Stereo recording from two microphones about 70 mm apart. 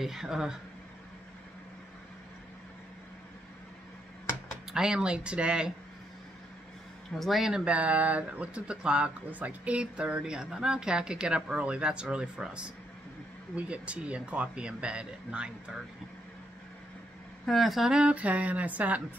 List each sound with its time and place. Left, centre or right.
0.0 s speech: centre
4.7 s speech: centre
7.2 s speech: centre
7.6 s speech: right
17.5 s speech: centre
17.9 s speech: centre